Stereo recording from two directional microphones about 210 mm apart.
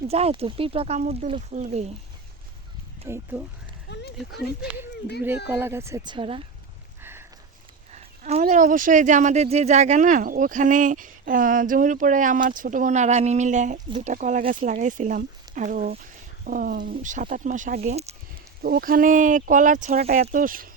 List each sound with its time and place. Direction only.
0.1 s speech: 30° right (ahead or behind)
3.1 s speech: 10° right (ahead or behind)
3.8 s a sound: 55° left (ahead or behind)
5.5 s speech: 10° right (ahead or behind)
7.0 s a sound: 10° right (ahead or behind)
7.9 s speech: 30° right (ahead or behind)
18.6 s speech: 45° right (ahead or behind)